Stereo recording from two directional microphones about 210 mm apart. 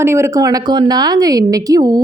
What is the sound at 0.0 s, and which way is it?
Speech, 10° right (ahead or behind).